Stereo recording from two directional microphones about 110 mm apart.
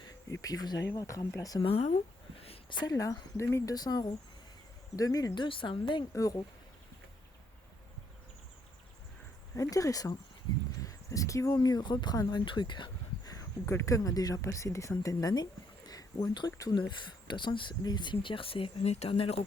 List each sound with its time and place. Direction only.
0.0 s insect: 35° left (ahead or behind)
0.9 s speech: 30° left (ahead or behind)
1.6 s speech: 70° left (ahead or behind)
2.4 s a sound: 60° left (ahead or behind)
2.8 s speech: 30° left (ahead or behind)
3.8 s speech: 40° left (ahead or behind)
6.1 s speech: 30° left (ahead or behind)
9.6 s speech: 30° left (ahead or behind)
13.3 s speech: 25° left (ahead or behind)
15.9 s a sound: 35° left (ahead or behind)
16.5 s speech: 30° left (ahead or behind)
16.7 s speech: 45° left (ahead or behind); by 19.4 s 65° left (ahead or behind)